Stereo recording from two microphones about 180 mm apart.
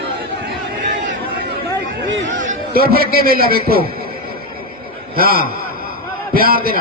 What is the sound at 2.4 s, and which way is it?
Chatter, 55° right (ahead or behind).